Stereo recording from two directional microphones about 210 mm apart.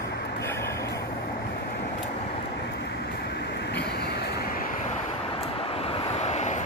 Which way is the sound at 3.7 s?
50° left (ahead or behind).